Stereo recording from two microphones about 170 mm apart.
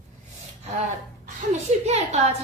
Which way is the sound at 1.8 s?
40° right (ahead or behind).